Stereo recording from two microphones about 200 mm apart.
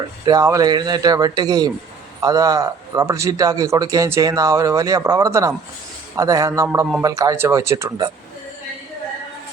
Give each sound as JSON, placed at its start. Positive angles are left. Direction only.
{"t": 0.3, "sound": "a man's voice", "side_deg": -15}